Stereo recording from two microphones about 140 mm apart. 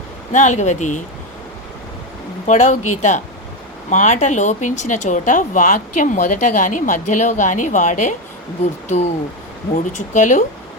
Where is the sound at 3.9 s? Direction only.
60° left (ahead or behind).